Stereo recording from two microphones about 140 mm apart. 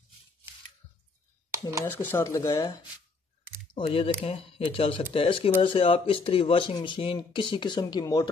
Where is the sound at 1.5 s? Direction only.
20° right (ahead or behind).